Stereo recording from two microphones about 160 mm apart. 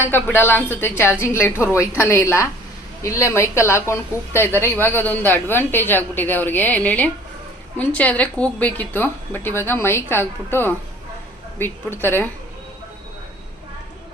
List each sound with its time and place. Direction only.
0.0 s a woman's voice: 15° left (ahead or behind)